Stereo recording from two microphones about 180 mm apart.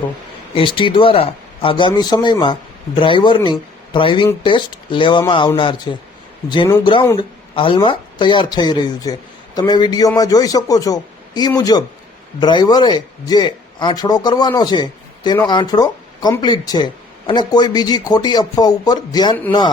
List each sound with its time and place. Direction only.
0.5 s speech: 30° left (ahead or behind)
7.2 s speech: 30° left (ahead or behind)